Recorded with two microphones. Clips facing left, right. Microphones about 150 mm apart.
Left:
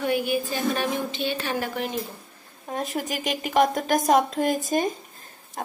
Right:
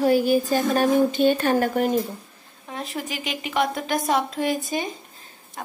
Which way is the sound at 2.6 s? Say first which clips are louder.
Left 3 dB; 45° left (ahead or behind).